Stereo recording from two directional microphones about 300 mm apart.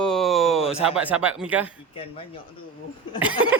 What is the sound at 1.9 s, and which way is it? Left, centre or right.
Speech, centre.